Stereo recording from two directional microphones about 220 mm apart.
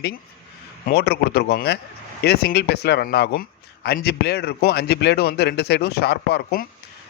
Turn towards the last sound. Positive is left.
turn(degrees=45)  # may be behind; listen again after turning